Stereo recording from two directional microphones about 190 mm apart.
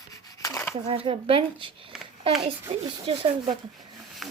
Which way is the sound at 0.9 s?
30° right (ahead or behind).